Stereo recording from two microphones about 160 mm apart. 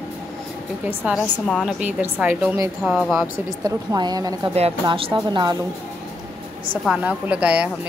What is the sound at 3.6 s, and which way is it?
A woman's voice, 25° right (ahead or behind).